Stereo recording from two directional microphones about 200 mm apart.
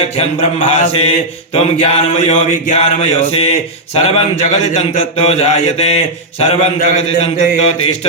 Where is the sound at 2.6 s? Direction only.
30° left (ahead or behind).